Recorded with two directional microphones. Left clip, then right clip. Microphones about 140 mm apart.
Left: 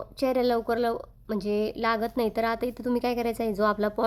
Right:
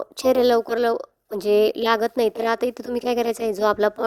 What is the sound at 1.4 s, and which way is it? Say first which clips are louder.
Speech: right 10 dB; 45° right (ahead or behind).